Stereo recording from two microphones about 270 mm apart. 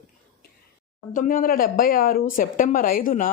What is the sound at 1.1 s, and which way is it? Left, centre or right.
Speech, left.